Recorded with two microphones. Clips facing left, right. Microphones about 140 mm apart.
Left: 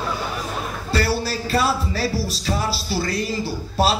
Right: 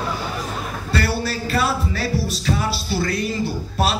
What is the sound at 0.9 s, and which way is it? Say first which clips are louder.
Music: left 1 dB; 30° left (ahead or behind).